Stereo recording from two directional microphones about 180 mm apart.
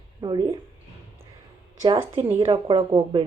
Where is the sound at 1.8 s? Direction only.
30° right (ahead or behind).